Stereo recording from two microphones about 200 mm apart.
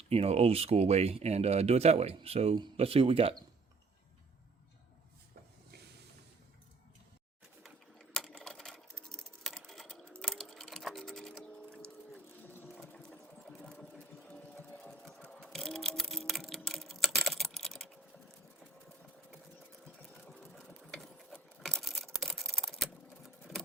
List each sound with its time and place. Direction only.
0.1 s speech: 30° right (ahead or behind)
7.6 s sewing machine: centre (ahead or behind)
9.0 s computer keyboard: 5° left (ahead or behind)
12.6 s sewing machine: 5° left (ahead or behind)
20.0 s sewing machine: 5° left (ahead or behind)
22.2 s computer keyboard: centre (ahead or behind)